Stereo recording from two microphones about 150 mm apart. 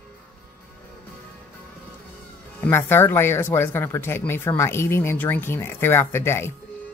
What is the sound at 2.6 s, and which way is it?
Speech, 15° left (ahead or behind).